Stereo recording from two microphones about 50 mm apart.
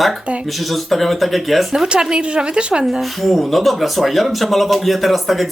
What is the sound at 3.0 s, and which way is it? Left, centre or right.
Speech, centre.